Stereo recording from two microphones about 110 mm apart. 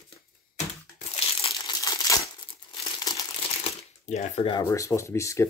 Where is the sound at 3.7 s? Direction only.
90° left.